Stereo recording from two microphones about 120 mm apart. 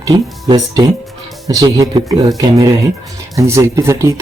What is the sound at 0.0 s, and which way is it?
Speech, 35° right (ahead or behind).